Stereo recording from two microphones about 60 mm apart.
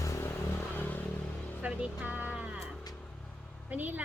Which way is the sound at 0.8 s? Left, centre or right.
Left.